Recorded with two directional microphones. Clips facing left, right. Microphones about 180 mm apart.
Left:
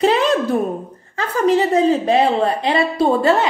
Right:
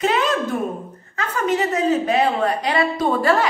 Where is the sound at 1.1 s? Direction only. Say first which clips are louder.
Left 5 dB; 30° left (ahead or behind).